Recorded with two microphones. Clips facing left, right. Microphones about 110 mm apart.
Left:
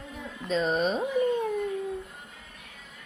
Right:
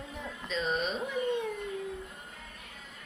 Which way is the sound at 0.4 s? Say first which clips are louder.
Left 7 dB; 40° left (ahead or behind).